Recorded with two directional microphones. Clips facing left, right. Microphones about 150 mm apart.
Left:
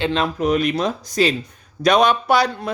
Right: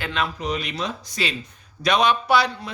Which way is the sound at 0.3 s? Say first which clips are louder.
Left 9 dB; 50° left (ahead or behind).